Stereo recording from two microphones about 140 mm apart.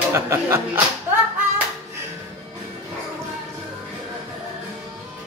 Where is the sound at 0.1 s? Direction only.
20° right (ahead or behind).